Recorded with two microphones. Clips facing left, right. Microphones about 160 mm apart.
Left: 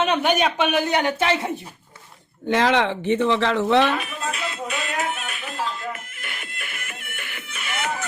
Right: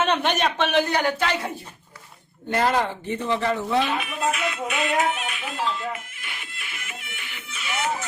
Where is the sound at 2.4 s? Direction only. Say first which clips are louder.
Left 3 dB; 90° left.